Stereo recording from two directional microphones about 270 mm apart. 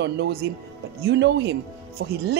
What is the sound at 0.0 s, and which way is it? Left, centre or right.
Speech, right.